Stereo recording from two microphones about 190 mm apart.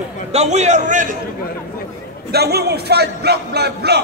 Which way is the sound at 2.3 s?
55° right (ahead or behind).